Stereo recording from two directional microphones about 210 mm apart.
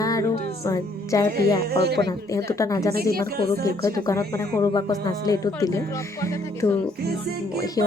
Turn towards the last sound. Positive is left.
turn(degrees=15)  # may be behind; listen again after turning